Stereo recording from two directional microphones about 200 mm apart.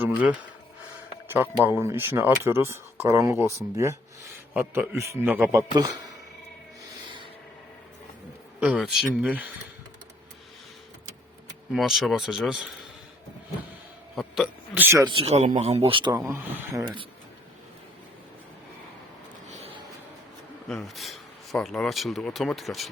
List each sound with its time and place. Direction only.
1.6 s speech: 15° right (ahead or behind)
8.6 s speech: 5° right (ahead or behind)
11.7 s speech: centre (ahead or behind)
14.2 s speech: 5° right (ahead or behind)
15.0 s speech: 25° right (ahead or behind)
16.3 s speech: 10° right (ahead or behind)
19.5 s a sound: 30° right (ahead or behind)
20.7 s speech: centre (ahead or behind)